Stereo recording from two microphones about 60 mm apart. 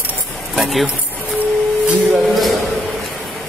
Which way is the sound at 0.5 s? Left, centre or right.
Centre.